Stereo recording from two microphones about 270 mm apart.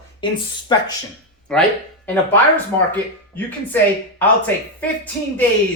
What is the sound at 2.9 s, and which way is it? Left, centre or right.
Speech, centre.